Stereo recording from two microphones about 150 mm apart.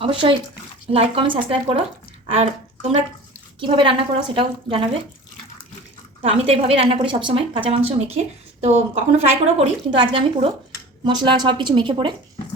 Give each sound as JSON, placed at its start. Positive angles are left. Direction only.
{"t": 0.0, "sound": "a woman's voice", "side_deg": -35}
{"t": 2.2, "sound": "a sound", "side_deg": -40}
{"t": 3.6, "sound": "a woman's voice", "side_deg": -35}
{"t": 6.2, "sound": "a woman's voice", "side_deg": -40}